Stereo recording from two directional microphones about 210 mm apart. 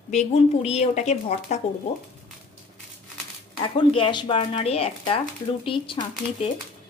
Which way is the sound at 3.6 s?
25° left (ahead or behind).